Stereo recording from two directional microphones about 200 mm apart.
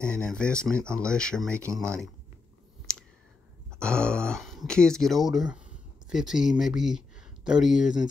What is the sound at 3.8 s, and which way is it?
Speech, 5° left (ahead or behind).